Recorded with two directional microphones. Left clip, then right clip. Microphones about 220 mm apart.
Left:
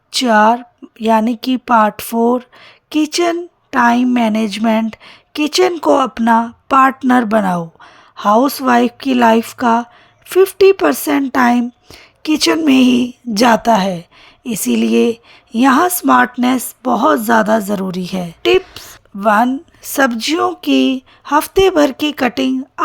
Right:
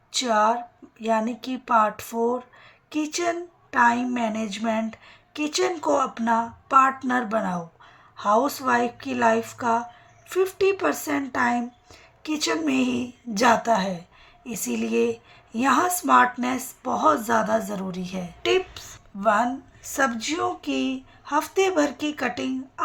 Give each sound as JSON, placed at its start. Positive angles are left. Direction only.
{"t": 0.1, "sound": "a woman's voice", "side_deg": 40}